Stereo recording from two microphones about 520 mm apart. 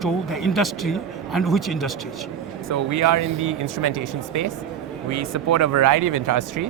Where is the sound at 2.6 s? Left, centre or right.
Right.